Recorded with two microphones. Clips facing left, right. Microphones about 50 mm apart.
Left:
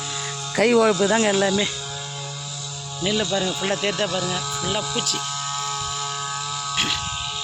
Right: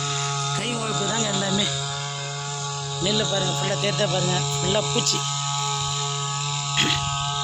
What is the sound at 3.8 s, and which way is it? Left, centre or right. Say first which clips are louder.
Speech: even; centre.